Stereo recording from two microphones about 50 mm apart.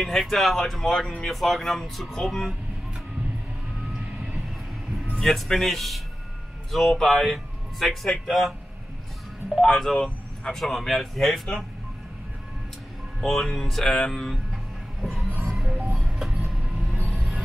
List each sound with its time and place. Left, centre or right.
0.0 s speech: centre
5.2 s speech: centre
9.7 s speech: centre
9.9 s speech: centre
10.6 s speech: centre
13.2 s speech: centre
14.3 s a sound: centre
15.4 s music: centre
16.2 s train: centre